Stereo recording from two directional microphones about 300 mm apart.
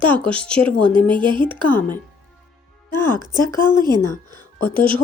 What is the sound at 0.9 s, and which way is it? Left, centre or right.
Speech, centre.